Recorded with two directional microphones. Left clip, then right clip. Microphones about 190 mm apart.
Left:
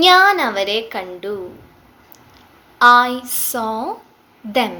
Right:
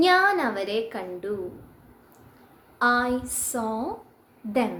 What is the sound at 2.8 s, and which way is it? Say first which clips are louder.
A woman's voice: left 12 dB; 10° right (ahead or behind).